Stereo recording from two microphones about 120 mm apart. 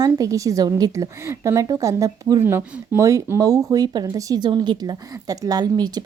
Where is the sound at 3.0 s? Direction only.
30° right (ahead or behind).